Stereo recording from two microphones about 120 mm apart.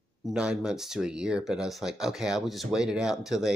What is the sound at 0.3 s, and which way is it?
Speech, 5° right (ahead or behind).